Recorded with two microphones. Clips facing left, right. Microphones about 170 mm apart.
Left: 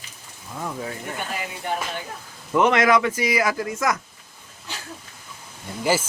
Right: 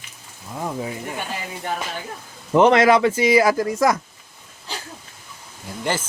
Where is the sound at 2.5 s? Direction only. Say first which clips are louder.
Right 4 dB; 30° right (ahead or behind).